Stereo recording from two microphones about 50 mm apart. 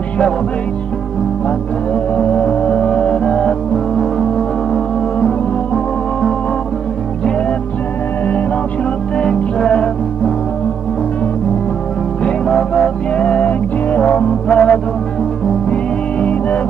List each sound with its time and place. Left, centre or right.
2.1 s music: left
3.7 s music: centre
9.1 s music: centre
12.4 s music: centre
13.1 s music: left